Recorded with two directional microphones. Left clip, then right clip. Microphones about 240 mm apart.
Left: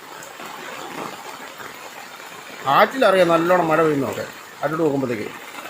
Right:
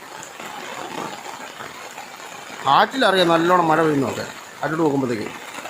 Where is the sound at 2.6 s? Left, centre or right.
Centre.